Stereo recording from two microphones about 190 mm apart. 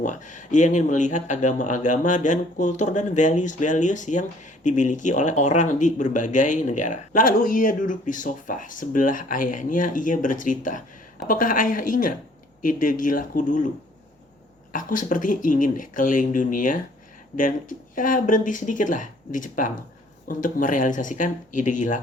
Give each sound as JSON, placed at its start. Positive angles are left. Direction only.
{"t": 0.0, "sound": "speech", "side_deg": 40}
{"t": 14.7, "sound": "speech", "side_deg": 45}